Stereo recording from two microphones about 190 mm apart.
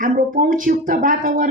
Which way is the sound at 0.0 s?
45° right (ahead or behind).